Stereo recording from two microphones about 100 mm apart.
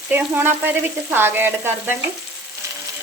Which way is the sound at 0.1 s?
20° right (ahead or behind).